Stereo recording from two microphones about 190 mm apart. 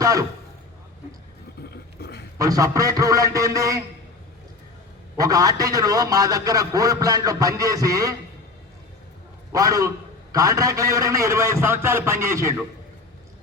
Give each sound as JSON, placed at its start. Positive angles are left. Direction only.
{"t": 0.0, "sound": "speech", "side_deg": -15}
{"t": 1.7, "sound": "a sound", "side_deg": 60}
{"t": 2.4, "sound": "a man's voice", "side_deg": -20}
{"t": 5.1, "sound": "a man's voice", "side_deg": -20}
{"t": 9.5, "sound": "a man's voice", "side_deg": -15}